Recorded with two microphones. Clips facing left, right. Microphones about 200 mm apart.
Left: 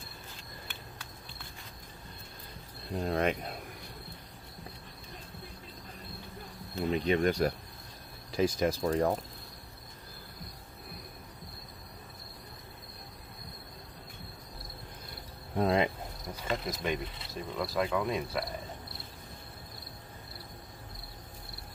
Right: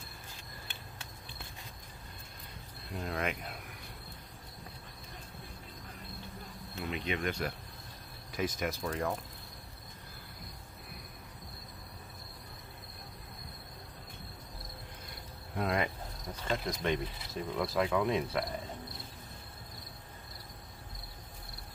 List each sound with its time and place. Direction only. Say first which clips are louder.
2.9 s speech: left 6 dB; 35° left (ahead or behind)
6.7 s speech: left 8 dB; 35° left (ahead or behind)
15.5 s speech: left 5 dB; 30° left (ahead or behind)
16.3 s speech: even; 5° left (ahead or behind)